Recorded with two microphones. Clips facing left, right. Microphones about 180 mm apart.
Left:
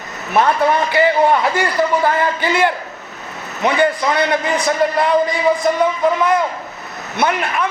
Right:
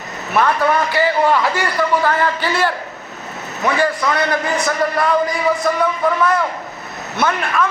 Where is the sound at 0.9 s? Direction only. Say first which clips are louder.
Left 4 dB; 25° left (ahead or behind).